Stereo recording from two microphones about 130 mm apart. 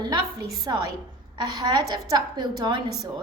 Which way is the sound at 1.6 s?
30° right (ahead or behind).